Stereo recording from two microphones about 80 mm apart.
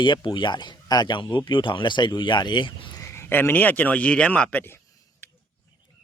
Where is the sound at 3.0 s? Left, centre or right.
Left.